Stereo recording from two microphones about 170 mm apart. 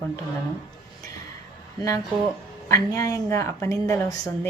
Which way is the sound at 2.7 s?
20° left (ahead or behind).